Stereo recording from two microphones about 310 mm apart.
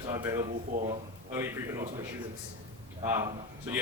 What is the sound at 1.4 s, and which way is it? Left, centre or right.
Speech, centre.